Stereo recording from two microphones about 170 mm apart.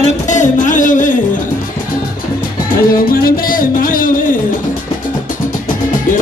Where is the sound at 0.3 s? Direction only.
45° left (ahead or behind).